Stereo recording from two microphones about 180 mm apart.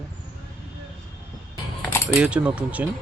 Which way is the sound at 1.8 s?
15° left (ahead or behind).